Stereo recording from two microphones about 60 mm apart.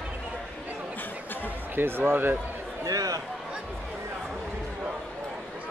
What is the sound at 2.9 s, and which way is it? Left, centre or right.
Speech, right.